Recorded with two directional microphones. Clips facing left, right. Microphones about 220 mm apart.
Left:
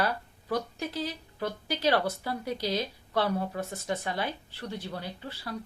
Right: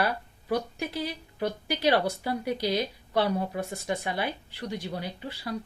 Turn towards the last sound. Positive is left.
turn(degrees=-15)  # may be behind; listen again after turning